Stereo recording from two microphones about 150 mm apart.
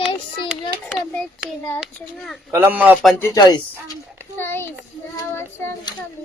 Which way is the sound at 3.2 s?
20° left (ahead or behind).